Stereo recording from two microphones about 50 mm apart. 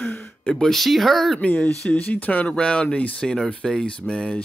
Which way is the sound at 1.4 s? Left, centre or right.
Left.